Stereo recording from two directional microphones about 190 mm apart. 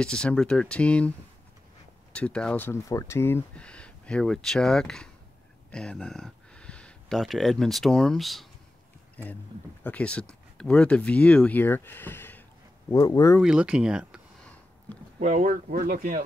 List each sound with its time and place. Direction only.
0.0 s speech: 5° left (ahead or behind)
2.1 s speech: 5° left (ahead or behind)
13.4 s speech: 5° right (ahead or behind)
15.1 s speech: 40° right (ahead or behind)